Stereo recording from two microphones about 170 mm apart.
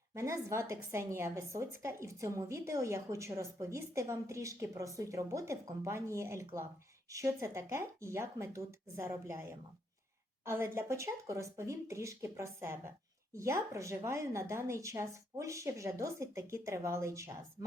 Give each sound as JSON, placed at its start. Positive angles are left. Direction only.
{"t": 0.1, "sound": "a woman's voice", "side_deg": -15}